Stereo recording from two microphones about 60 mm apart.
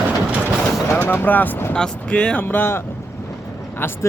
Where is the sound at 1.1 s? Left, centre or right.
Left.